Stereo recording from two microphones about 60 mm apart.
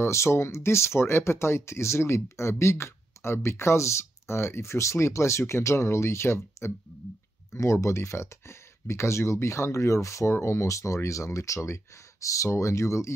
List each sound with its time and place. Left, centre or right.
0.0 s speech: left